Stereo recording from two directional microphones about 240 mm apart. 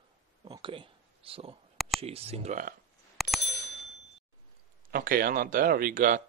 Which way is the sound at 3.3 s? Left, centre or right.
Right.